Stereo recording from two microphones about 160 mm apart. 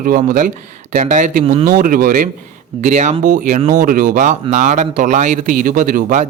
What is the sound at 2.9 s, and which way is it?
Speech, 50° right (ahead or behind).